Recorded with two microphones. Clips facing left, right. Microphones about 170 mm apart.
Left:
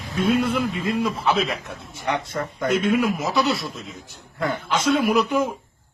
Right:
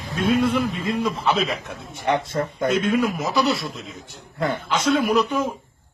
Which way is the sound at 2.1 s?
30° right (ahead or behind).